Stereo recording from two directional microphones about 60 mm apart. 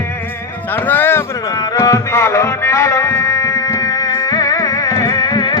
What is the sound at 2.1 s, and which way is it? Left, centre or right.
Music, left.